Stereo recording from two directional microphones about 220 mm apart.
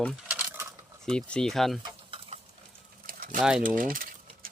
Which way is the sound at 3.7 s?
35° right (ahead or behind).